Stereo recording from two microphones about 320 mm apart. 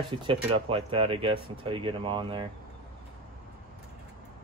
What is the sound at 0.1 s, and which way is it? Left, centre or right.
Speech, centre.